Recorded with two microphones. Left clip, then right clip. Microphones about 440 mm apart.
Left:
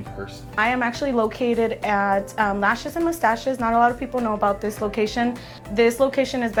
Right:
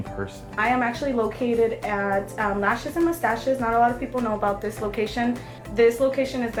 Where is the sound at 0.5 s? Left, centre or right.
Left.